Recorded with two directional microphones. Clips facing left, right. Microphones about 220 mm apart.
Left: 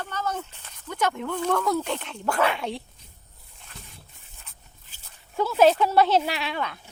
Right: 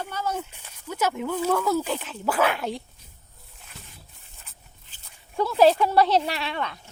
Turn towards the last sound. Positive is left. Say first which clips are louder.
# even
turn(degrees=0)  # may be behind; listen again after turning